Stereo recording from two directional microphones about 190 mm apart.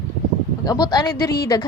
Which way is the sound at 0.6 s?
20° left (ahead or behind).